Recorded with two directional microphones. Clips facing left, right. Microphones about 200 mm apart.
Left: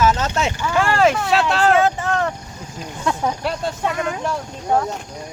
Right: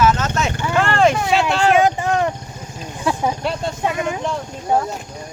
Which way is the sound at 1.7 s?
15° right (ahead or behind).